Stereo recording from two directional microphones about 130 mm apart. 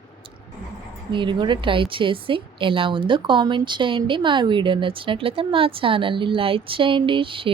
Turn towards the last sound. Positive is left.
turn(degrees=-40)  # may be behind; listen again after turning